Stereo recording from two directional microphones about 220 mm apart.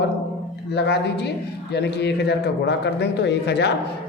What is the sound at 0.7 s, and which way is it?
A woman's voice, 50° left (ahead or behind).